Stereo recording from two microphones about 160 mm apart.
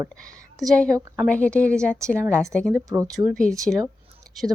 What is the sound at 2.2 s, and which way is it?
Speech, 15° right (ahead or behind).